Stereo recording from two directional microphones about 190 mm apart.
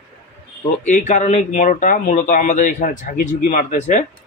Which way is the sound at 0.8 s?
40° left (ahead or behind).